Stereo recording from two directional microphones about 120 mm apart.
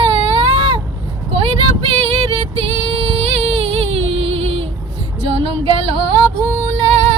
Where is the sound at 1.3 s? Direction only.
45° right (ahead or behind).